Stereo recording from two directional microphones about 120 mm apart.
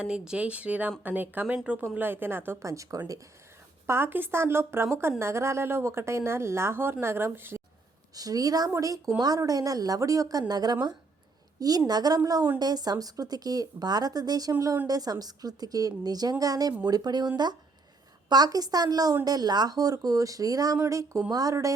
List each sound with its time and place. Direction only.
0.0 s speech: 5° right (ahead or behind)
8.1 s speech: 30° right (ahead or behind)
11.9 s speech: 35° right (ahead or behind)